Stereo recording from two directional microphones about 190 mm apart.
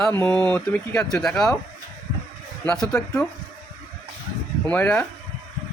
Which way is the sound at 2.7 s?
5° left (ahead or behind).